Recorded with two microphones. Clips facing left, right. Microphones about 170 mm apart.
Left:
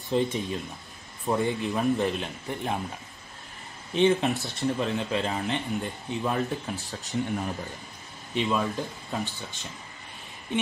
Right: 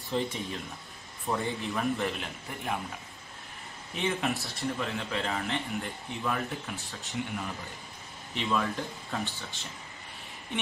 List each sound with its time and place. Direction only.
0.1 s speech: 20° left (ahead or behind)
3.9 s speech: 25° left (ahead or behind)
6.9 s speech: 40° left (ahead or behind)
8.4 s speech: 20° left (ahead or behind)